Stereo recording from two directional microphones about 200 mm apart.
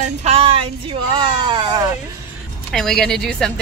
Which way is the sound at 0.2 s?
30° right (ahead or behind).